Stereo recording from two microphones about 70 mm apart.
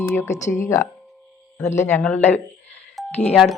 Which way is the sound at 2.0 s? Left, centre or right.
Left.